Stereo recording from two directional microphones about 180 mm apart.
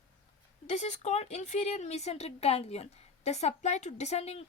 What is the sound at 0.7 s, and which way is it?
Speech, 40° left (ahead or behind).